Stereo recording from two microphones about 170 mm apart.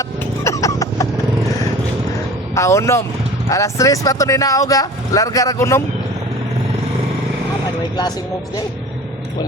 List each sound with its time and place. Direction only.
0.0 s music: 20° left (ahead or behind)
2.6 s speech: 15° left (ahead or behind)